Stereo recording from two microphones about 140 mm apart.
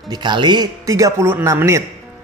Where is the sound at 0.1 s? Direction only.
35° right (ahead or behind).